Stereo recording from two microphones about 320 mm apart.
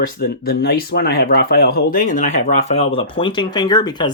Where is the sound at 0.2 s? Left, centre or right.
Left.